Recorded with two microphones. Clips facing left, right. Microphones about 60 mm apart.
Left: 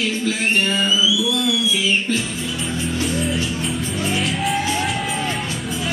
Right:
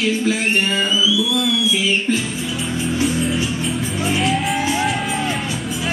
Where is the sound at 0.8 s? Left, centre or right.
Centre.